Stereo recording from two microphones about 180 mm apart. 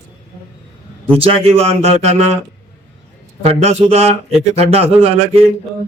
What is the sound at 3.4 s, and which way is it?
A man's voice, 35° right (ahead or behind).